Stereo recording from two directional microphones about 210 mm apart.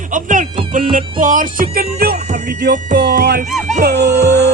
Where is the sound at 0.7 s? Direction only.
40° right (ahead or behind).